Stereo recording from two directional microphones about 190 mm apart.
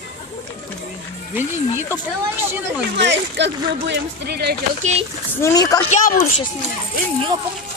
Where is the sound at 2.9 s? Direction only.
65° right (ahead or behind).